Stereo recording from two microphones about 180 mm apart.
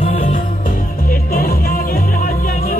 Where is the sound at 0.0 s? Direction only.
40° left (ahead or behind).